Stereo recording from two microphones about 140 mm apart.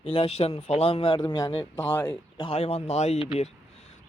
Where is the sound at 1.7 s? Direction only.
15° left (ahead or behind).